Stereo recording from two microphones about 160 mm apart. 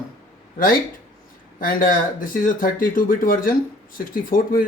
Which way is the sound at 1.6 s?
60° left (ahead or behind).